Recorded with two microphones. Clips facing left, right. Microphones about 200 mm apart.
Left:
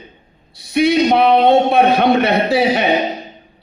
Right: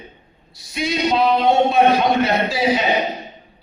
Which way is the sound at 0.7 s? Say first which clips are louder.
Left 7 dB; 65° left (ahead or behind).